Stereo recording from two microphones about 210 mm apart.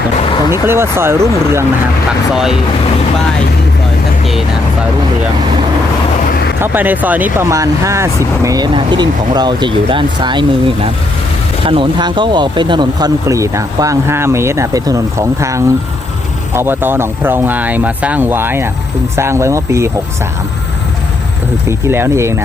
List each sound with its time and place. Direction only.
0.5 s speech: 10° right (ahead or behind)
6.6 s speech: 10° right (ahead or behind)
11.6 s speech: 25° right (ahead or behind)
21.7 s speech: 10° right (ahead or behind)